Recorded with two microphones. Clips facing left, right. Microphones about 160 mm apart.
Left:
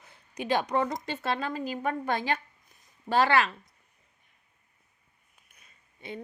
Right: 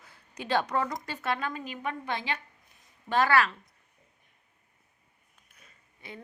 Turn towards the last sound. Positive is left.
turn(degrees=25)  # may be behind; listen again after turning